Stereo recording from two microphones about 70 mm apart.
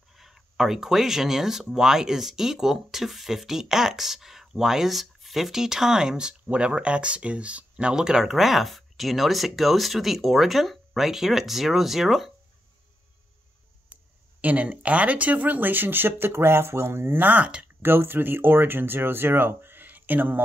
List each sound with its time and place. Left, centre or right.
0.1 s speech: centre
14.4 s speech: right
17.8 s speech: right